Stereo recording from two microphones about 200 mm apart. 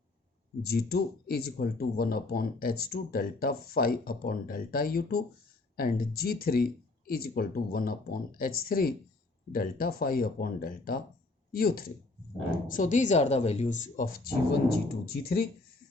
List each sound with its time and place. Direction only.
0.6 s speech: 50° left (ahead or behind)